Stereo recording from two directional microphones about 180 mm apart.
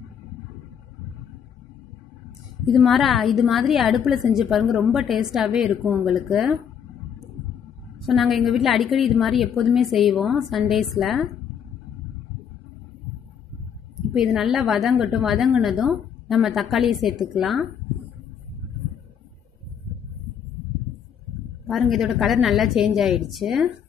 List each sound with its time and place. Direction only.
2.8 s a woman's voice: centre (ahead or behind)
8.0 s a woman's voice: centre (ahead or behind)
14.1 s a woman's voice: centre (ahead or behind)
21.6 s a woman's voice: centre (ahead or behind)